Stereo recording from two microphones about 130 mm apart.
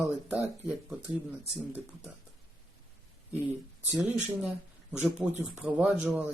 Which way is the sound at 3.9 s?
10° right (ahead or behind).